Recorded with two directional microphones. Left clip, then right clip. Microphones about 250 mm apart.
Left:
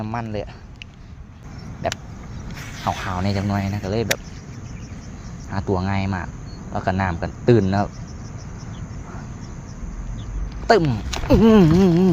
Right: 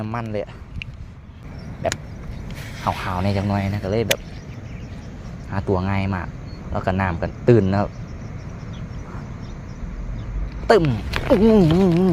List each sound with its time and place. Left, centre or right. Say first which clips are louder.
0.0 s speech: right 1 dB; centre
2.7 s speech: right 1 dB; centre
5.5 s speech: right 1 dB; centre
10.7 s speech: right 1 dB; centre
11.4 s speech: left 3 dB; centre